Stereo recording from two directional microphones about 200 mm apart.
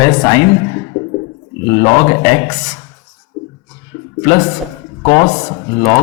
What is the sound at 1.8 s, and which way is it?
Speech, 20° left (ahead or behind).